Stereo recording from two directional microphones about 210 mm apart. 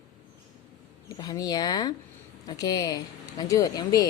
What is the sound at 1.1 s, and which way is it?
A woman's voice, 20° left (ahead or behind).